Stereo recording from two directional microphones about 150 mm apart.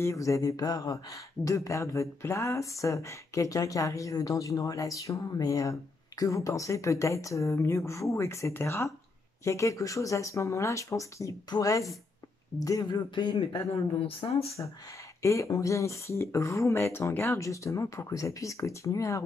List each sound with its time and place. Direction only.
0.0 s speech: 20° left (ahead or behind); by 14.5 s 40° left (ahead or behind)
15.2 s speech: 20° left (ahead or behind)